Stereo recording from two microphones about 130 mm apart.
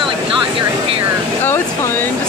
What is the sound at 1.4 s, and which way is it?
Speech, 20° left (ahead or behind).